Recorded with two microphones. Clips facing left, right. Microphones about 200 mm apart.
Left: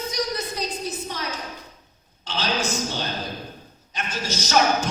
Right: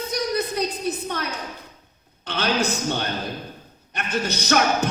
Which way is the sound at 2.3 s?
60° right (ahead or behind).